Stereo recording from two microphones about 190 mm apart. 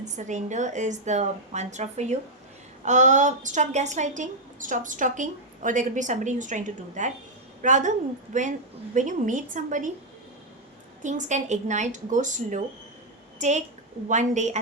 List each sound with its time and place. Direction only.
0.0 s a woman's voice: 40° right (ahead or behind)
11.0 s a woman's voice: 40° right (ahead or behind)